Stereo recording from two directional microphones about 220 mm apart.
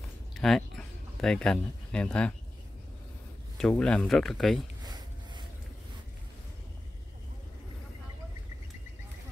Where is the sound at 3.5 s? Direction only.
5° left (ahead or behind).